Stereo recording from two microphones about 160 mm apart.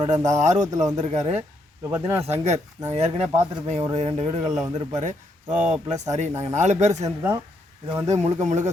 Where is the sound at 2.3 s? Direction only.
45° right (ahead or behind).